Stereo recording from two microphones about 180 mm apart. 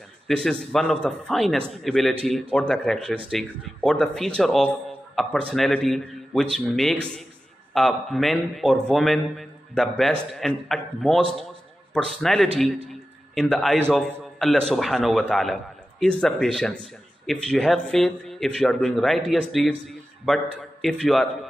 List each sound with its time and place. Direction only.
0.4 s a man's voice: 5° left (ahead or behind)